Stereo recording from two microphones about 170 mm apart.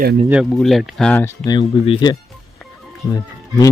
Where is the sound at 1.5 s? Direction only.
25° left (ahead or behind).